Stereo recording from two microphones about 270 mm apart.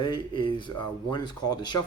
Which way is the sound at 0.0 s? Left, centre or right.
Centre.